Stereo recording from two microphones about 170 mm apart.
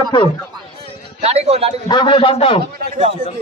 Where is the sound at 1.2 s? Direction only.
40° right (ahead or behind).